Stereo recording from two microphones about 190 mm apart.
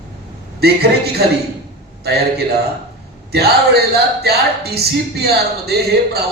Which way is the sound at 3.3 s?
55° right (ahead or behind).